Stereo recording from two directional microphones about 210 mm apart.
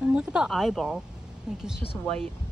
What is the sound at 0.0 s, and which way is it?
Speech, 5° right (ahead or behind).